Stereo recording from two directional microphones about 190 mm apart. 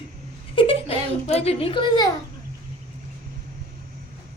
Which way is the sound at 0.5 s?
25° left (ahead or behind).